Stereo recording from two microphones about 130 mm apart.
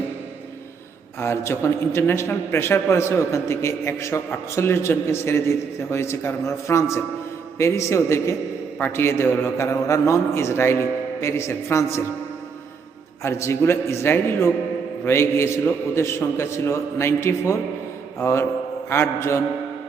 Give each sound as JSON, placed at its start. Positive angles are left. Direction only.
{"t": 1.2, "sound": "a man's voice", "side_deg": 20}
{"t": 13.2, "sound": "a man's voice", "side_deg": 20}